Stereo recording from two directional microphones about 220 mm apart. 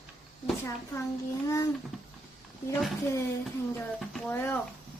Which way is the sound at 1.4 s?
15° left (ahead or behind).